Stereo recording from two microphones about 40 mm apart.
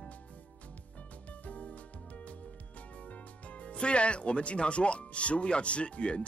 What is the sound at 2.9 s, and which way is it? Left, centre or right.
Speech, left.